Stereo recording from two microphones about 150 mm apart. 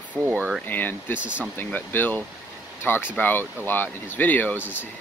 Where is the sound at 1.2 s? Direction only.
10° right (ahead or behind).